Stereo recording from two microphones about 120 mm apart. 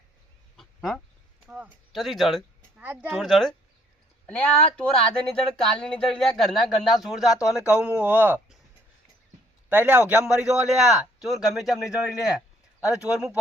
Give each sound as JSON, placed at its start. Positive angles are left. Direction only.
{"t": 0.5, "sound": "duck", "side_deg": 0}
{"t": 1.5, "sound": "a sound", "side_deg": -10}
{"t": 1.9, "sound": "speech", "side_deg": 0}
{"t": 2.7, "sound": "speech", "side_deg": -15}
{"t": 3.1, "sound": "speech", "side_deg": 0}
{"t": 7.3, "sound": "speech", "side_deg": 25}
{"t": 7.7, "sound": "speech", "side_deg": -10}
{"t": 9.6, "sound": "a man's voice", "side_deg": -15}